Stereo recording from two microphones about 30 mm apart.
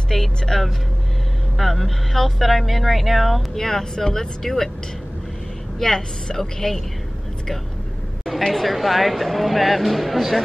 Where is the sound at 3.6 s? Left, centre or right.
Centre.